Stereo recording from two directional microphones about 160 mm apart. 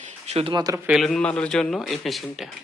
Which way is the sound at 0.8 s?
Centre (ahead or behind).